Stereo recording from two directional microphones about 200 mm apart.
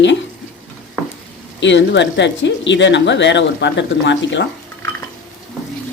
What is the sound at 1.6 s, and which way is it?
Speech, 65° left (ahead or behind).